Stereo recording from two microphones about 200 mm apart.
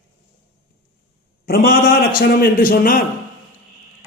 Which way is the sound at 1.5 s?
50° left (ahead or behind).